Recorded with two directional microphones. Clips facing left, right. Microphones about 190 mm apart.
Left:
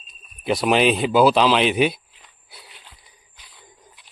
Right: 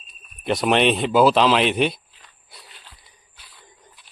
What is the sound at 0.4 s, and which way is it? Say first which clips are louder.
Speech: left 1 dB; centre (ahead or behind).